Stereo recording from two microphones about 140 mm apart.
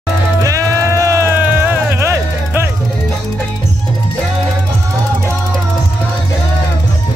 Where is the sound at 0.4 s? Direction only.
25° right (ahead or behind).